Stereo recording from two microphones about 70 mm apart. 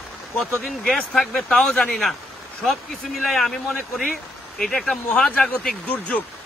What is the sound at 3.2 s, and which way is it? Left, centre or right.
A man's voice, centre.